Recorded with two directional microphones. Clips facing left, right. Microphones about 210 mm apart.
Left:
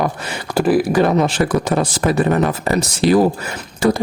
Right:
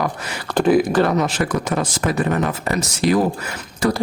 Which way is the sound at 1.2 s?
30° left (ahead or behind).